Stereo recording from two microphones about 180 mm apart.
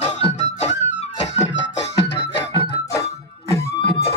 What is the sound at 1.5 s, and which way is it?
Music, 80° left.